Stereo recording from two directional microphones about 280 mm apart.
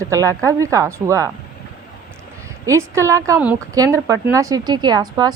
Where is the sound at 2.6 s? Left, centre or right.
Centre.